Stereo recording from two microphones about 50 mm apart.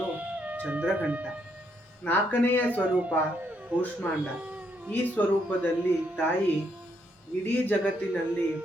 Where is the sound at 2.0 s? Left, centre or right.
Left.